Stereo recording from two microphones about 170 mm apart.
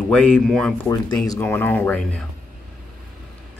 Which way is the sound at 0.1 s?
5° left (ahead or behind).